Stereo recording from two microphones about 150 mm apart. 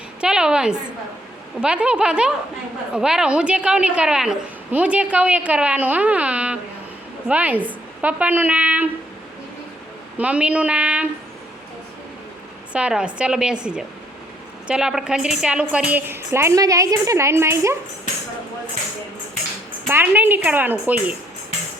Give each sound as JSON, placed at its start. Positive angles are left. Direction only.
{"t": 0.2, "sound": "a woman's voice", "side_deg": -5}
{"t": 10.2, "sound": "a woman's voice", "side_deg": -10}
{"t": 12.7, "sound": "a woman's voice", "side_deg": -5}
{"t": 19.9, "sound": "a woman's voice", "side_deg": -15}